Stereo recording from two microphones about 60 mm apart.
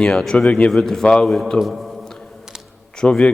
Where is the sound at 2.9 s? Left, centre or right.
Centre.